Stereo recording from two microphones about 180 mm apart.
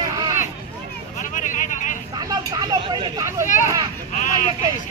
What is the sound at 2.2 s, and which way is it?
Vehicle, 20° right (ahead or behind).